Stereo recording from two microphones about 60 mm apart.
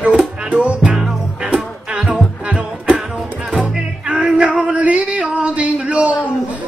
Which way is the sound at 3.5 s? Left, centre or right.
Centre.